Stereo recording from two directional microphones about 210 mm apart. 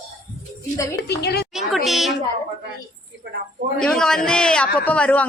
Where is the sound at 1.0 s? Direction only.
50° left (ahead or behind).